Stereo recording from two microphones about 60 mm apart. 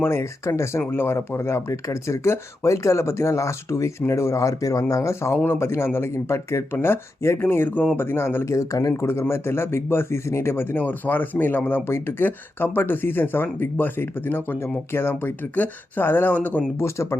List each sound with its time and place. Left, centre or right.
0.0 s speech: left
0.8 s speech: left
6.7 s speech: left
7.2 s speech: left
8.5 s speech: left
16.3 s speech: left
16.8 s speech: left